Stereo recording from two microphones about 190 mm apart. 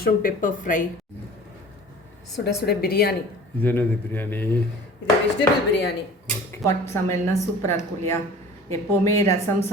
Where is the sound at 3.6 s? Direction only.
10° left (ahead or behind).